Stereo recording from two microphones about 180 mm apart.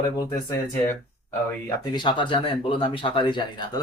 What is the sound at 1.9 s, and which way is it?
Speech, 25° left (ahead or behind).